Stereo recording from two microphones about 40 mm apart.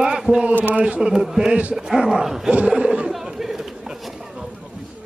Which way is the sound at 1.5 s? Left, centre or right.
Right.